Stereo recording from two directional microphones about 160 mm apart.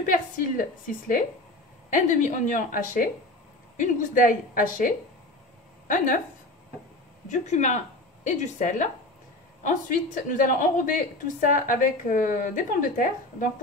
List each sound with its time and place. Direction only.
0.0 s a woman's voice: 60° left (ahead or behind)
7.2 s a woman's voice: 45° left (ahead or behind)